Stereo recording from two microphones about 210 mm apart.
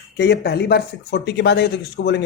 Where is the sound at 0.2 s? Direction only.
50° left (ahead or behind).